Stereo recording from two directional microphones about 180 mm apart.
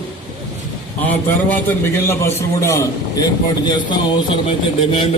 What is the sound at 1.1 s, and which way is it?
A man's voice, 10° left (ahead or behind).